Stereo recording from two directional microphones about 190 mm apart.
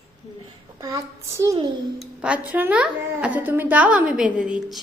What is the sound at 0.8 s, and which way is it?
Speech, 20° right (ahead or behind).